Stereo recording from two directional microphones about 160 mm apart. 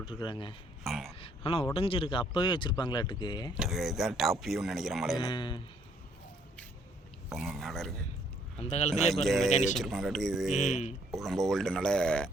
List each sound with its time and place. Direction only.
0.2 s speech: 30° left (ahead or behind)
0.9 s a sound: centre (ahead or behind)
1.2 s a sound: 35° left (ahead or behind)
1.7 s speech: 35° left (ahead or behind)
3.5 s speech: 5° right (ahead or behind)
5.2 s a man's voice: 30° left (ahead or behind)
7.3 s speech: centre (ahead or behind)
8.5 s speech: 40° left (ahead or behind)
9.2 s speech: centre (ahead or behind)
9.5 s speech: 45° left (ahead or behind)
9.7 s speech: centre (ahead or behind)
10.5 s speech: 50° left (ahead or behind)
11.1 s speech: centre (ahead or behind)